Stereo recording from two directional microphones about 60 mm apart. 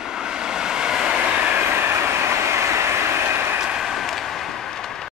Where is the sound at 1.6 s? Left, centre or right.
Right.